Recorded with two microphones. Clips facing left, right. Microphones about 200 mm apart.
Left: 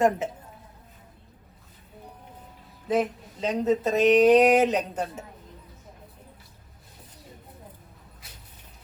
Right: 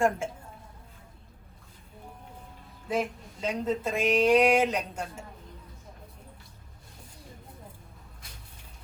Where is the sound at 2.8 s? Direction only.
10° right (ahead or behind).